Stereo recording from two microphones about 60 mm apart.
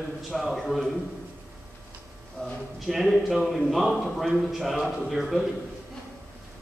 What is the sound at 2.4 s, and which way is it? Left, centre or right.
Speech, centre.